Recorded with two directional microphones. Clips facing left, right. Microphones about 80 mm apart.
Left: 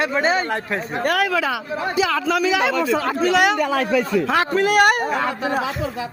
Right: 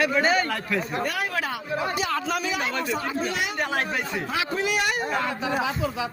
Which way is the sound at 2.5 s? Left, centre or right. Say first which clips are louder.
Left 8 dB; left.